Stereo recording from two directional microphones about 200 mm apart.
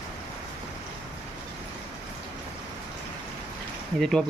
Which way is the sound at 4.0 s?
Centre (ahead or behind).